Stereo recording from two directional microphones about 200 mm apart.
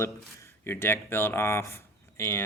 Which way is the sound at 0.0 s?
15° left (ahead or behind).